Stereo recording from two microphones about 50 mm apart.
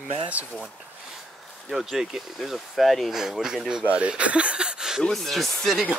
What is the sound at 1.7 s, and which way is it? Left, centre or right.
Speech, centre.